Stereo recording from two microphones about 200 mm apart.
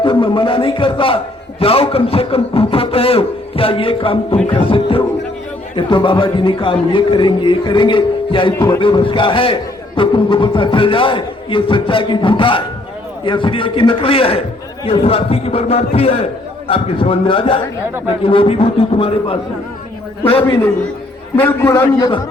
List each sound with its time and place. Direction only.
0.0 s a man's voice: 25° left (ahead or behind)
21.4 s a man's voice: 10° left (ahead or behind)